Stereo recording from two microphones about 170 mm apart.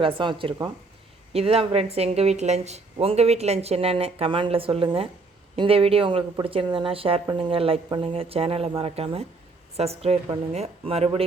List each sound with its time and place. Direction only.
0.0 s speech: 30° right (ahead or behind)